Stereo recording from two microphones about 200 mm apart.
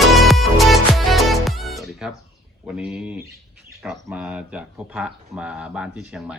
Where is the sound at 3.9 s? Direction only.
5° right (ahead or behind).